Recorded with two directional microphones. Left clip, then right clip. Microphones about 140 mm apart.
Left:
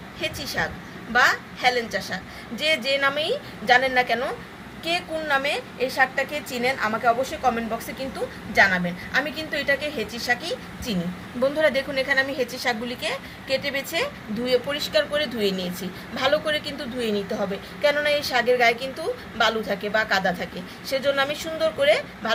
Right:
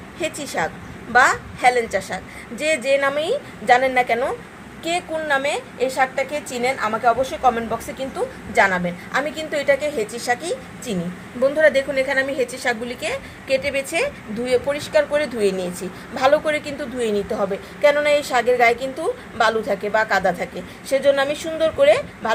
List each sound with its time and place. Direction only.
0.2 s a woman's voice: 45° right (ahead or behind); by 7.8 s 25° right (ahead or behind)
8.5 s a woman's voice: 40° right (ahead or behind)
11.6 s a woman's voice: 35° right (ahead or behind)